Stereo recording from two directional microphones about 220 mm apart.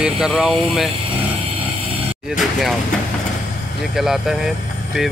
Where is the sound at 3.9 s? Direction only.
Centre (ahead or behind).